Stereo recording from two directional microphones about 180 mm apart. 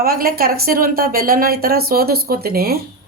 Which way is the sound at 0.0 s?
55° right (ahead or behind).